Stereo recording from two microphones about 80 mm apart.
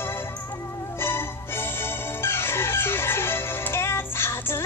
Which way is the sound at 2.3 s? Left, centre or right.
Left.